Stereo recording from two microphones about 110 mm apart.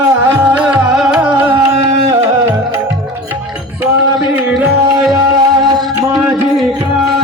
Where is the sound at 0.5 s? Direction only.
10° right (ahead or behind).